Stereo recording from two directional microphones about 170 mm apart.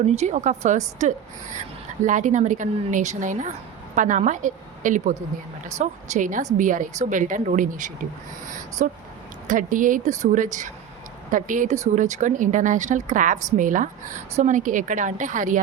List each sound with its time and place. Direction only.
0.0 s a woman's voice: 40° right (ahead or behind)